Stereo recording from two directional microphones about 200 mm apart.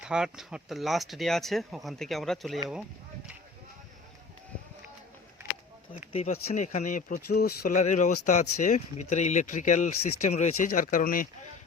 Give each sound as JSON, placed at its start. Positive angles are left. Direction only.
{"t": 0.0, "sound": "speech", "side_deg": -5}
{"t": 6.1, "sound": "speech", "side_deg": 30}